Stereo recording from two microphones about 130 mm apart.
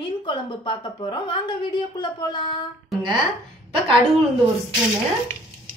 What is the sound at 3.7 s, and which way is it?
Speech, 45° right (ahead or behind).